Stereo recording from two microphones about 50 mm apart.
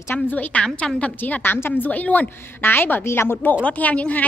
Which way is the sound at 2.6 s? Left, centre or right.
Left.